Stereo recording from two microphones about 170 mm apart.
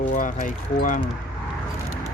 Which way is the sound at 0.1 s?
50° left (ahead or behind).